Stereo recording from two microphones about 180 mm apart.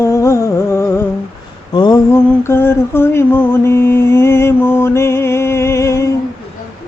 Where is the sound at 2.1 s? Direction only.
15° left (ahead or behind).